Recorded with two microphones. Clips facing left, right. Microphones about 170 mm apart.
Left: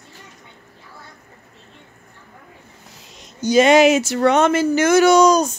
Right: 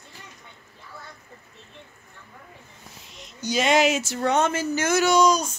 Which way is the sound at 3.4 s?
55° left (ahead or behind).